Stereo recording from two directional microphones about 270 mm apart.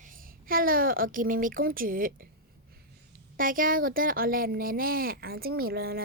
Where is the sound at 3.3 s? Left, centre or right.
Right.